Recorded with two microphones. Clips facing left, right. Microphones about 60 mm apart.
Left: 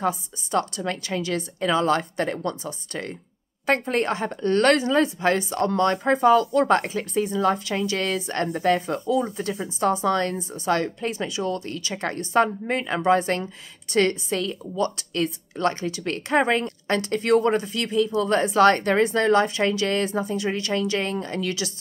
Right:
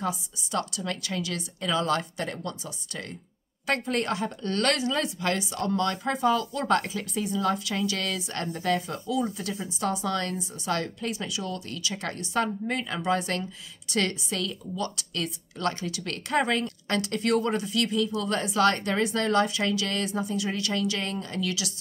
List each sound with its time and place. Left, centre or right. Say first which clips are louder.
0.0 s a woman's voice: left 6 dB; left